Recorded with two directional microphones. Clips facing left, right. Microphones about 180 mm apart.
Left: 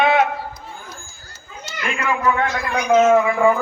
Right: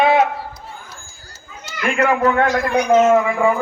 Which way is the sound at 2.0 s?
60° right (ahead or behind).